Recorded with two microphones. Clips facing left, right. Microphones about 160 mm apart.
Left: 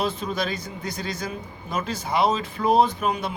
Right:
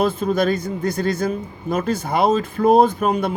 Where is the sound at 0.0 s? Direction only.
50° right (ahead or behind).